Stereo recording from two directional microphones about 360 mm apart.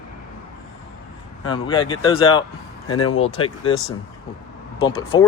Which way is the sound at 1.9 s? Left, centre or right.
Centre.